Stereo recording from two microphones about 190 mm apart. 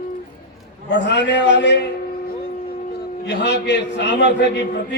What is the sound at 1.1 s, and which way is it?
Speech, 65° left (ahead or behind).